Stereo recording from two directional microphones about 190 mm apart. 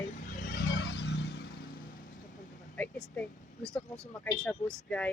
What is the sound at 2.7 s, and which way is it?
Speech, 5° left (ahead or behind).